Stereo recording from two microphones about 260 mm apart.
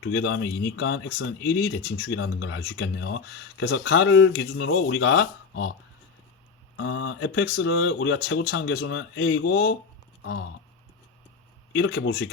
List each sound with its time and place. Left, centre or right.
0.0 s speech: left
6.7 s speech: left
11.8 s speech: left